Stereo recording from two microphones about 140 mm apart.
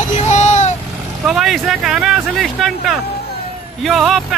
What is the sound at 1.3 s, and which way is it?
Speech, centre (ahead or behind).